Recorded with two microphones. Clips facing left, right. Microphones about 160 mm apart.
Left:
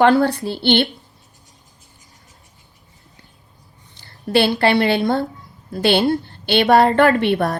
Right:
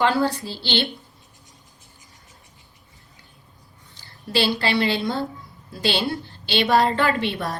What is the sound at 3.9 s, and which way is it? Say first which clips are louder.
A woman's voice: left 6 dB; 60° left (ahead or behind).